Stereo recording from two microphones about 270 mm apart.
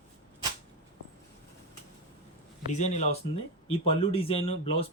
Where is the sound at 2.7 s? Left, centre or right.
Left.